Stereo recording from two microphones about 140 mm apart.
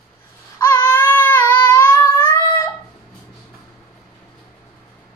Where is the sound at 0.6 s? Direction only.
15° left (ahead or behind).